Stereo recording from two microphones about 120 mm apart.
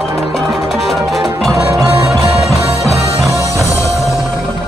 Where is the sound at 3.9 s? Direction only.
Centre (ahead or behind).